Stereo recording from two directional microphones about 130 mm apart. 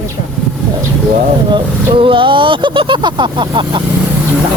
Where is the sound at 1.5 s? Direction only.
40° right (ahead or behind).